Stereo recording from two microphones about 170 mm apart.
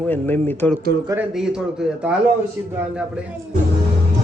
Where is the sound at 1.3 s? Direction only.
5° right (ahead or behind).